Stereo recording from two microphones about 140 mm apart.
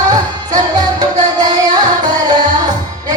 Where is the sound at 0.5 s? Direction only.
25° right (ahead or behind).